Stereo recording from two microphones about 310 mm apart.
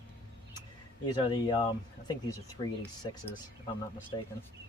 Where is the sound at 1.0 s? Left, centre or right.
Centre.